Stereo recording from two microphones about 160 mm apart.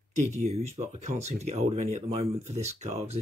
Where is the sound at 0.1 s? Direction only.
50° right (ahead or behind).